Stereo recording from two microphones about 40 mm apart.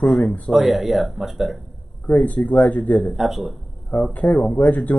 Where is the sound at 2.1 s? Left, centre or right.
Left.